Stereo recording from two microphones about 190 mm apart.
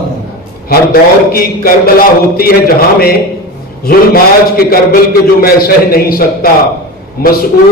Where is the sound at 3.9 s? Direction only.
50° left (ahead or behind).